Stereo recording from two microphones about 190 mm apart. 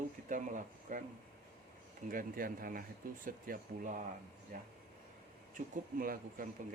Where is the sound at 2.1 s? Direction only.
45° right (ahead or behind).